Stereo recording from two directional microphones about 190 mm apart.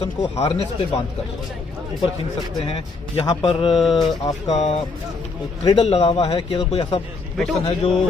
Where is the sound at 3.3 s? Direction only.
25° left (ahead or behind).